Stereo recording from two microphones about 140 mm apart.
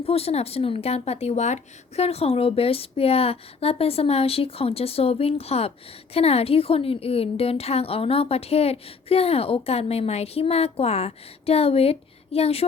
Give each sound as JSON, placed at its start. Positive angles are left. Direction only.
{"t": 0.0, "sound": "a woman's voice", "side_deg": 45}